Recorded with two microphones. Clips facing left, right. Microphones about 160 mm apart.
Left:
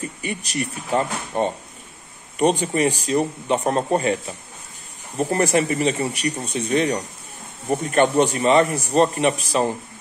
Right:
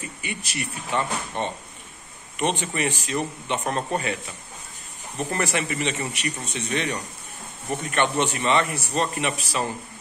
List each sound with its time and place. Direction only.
0.2 s a man's voice: 40° left (ahead or behind)
2.6 s a man's voice: 35° left (ahead or behind)
6.4 s speech: 10° left (ahead or behind)
6.7 s a man's voice: 35° left (ahead or behind)